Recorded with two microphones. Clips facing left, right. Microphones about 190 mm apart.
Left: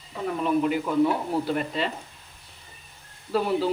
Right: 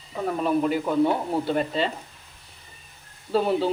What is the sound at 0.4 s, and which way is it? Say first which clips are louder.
A man's voice: even; 35° right (ahead or behind).